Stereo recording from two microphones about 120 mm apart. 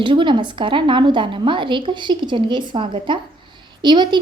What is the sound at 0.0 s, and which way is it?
A woman's voice, 40° right (ahead or behind).